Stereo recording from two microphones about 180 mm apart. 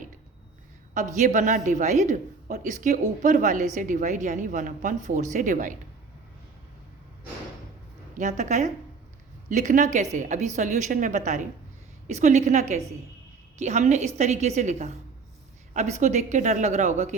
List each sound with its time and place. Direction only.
0.9 s speech: 45° right (ahead or behind)
8.1 s a woman's voice: 40° right (ahead or behind)